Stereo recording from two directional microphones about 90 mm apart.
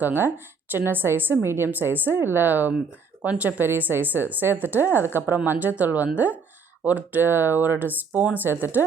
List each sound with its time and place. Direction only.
0.0 s a woman's voice: 20° right (ahead or behind)